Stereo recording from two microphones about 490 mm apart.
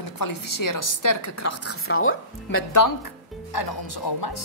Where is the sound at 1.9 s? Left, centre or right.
Left.